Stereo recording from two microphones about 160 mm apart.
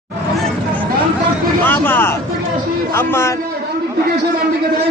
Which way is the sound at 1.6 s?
10° left (ahead or behind).